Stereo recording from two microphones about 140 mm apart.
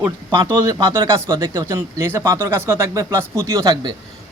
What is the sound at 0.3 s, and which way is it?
Speech, 25° right (ahead or behind).